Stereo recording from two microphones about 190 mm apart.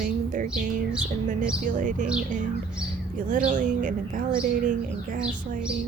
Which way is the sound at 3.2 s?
40° right (ahead or behind).